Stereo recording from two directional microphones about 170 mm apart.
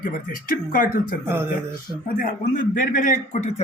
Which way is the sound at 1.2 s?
15° right (ahead or behind).